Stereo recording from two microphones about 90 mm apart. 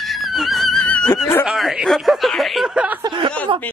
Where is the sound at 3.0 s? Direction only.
70° right (ahead or behind).